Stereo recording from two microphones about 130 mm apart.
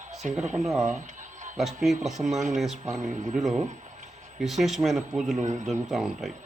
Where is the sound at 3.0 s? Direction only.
75° right (ahead or behind).